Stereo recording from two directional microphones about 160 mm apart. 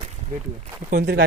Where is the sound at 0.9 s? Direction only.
75° right (ahead or behind).